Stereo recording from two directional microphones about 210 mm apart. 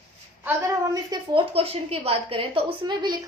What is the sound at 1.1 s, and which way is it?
A woman's voice, 25° right (ahead or behind).